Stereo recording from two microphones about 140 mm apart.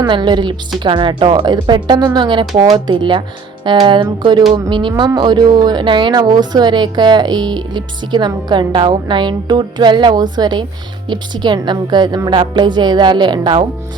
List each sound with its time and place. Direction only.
0.0 s speech: 30° right (ahead or behind)